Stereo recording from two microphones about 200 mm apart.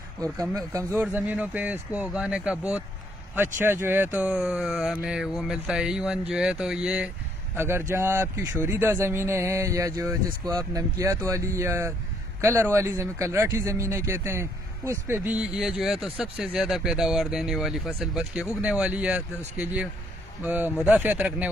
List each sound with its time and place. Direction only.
0.2 s speech: 15° right (ahead or behind)